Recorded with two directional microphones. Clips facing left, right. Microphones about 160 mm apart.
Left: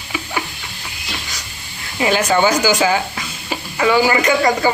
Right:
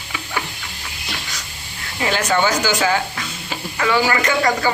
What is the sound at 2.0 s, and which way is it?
A man's voice, 15° left (ahead or behind).